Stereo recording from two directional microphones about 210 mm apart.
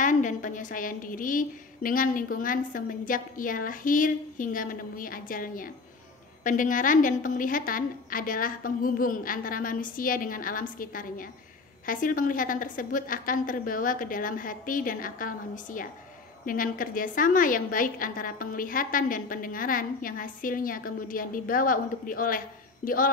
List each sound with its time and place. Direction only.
0.0 s a woman's voice: 35° left (ahead or behind)